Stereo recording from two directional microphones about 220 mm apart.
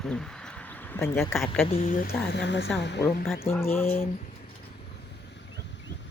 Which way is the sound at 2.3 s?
55° left (ahead or behind).